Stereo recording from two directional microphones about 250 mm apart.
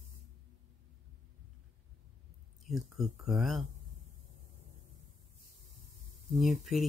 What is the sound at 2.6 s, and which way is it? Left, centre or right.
Speech, centre.